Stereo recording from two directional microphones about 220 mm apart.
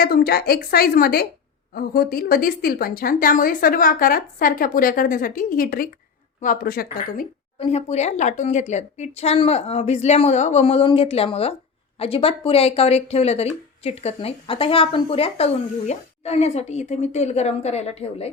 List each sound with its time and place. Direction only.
0.0 s a woman's voice: 45° left (ahead or behind); by 18.3 s 30° left (ahead or behind)